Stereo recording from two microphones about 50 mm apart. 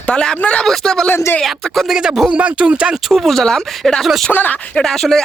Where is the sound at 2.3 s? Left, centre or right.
Right.